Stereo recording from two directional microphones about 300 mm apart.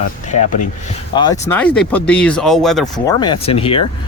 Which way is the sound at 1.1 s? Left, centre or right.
Centre.